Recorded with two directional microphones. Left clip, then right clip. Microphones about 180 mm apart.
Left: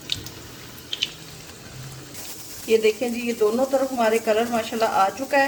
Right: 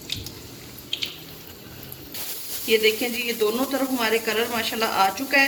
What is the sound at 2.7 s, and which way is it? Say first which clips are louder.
Speech: left 1 dB; 30° left (ahead or behind).